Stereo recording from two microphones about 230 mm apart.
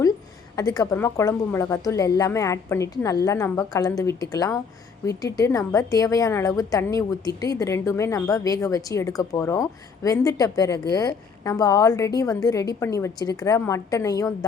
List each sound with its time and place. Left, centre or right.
0.5 s a woman's voice: centre